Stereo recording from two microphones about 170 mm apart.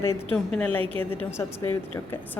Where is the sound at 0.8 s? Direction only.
30° right (ahead or behind).